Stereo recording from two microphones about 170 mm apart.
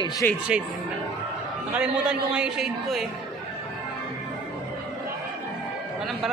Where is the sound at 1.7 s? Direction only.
5° right (ahead or behind).